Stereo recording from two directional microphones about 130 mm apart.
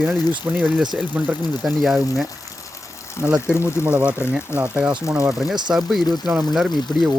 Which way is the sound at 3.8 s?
10° right (ahead or behind).